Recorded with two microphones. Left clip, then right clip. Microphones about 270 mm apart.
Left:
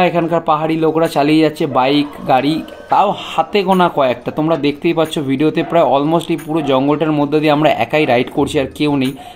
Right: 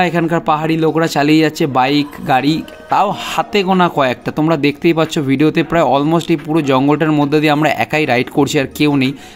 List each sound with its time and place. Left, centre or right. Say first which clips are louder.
0.0 s speech: left 1 dB; right